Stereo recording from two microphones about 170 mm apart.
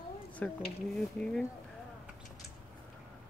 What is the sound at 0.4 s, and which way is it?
Speech, 5° left (ahead or behind).